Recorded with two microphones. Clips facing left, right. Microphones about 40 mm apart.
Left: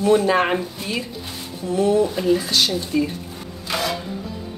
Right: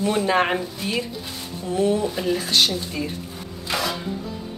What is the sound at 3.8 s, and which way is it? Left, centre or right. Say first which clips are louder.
Music: left 1 dB; centre.